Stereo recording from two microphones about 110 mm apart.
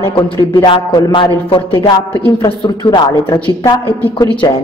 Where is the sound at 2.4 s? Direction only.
40° left (ahead or behind).